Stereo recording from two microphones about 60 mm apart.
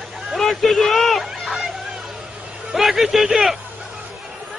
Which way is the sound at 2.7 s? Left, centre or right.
Centre.